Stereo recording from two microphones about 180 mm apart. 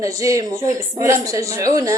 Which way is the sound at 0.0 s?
20° right (ahead or behind).